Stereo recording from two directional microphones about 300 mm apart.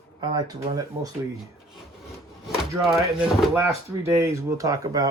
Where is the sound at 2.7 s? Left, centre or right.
Centre.